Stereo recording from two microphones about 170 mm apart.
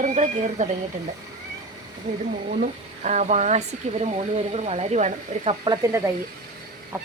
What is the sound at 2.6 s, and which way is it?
Speech, 45° right (ahead or behind).